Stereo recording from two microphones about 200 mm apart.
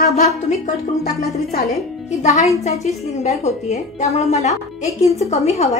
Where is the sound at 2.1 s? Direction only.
35° left (ahead or behind).